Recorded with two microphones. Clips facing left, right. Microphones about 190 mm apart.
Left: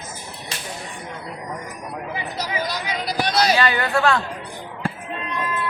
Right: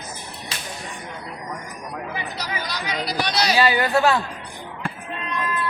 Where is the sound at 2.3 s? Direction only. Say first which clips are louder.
Left 4 dB; 50° left (ahead or behind).